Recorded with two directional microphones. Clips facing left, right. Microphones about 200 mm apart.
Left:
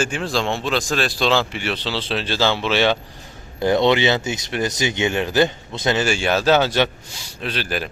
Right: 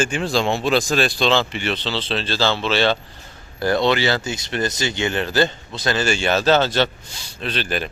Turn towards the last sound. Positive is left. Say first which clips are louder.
# right 1 dB
turn(degrees=5)  # may be behind; listen again after turning